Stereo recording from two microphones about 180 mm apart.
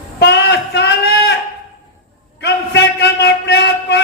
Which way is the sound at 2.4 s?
70° left (ahead or behind).